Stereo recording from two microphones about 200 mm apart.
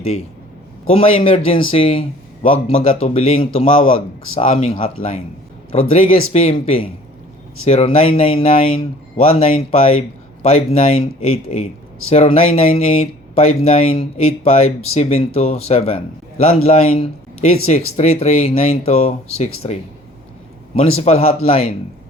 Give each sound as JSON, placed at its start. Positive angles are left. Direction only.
{"t": 0.9, "sound": "speech", "side_deg": 30}